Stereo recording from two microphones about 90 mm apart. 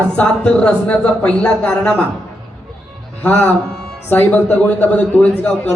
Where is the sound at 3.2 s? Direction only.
20° left (ahead or behind).